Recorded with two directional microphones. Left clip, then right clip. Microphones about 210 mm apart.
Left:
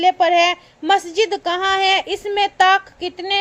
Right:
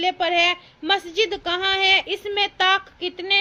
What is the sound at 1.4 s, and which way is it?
A woman's voice, 15° left (ahead or behind).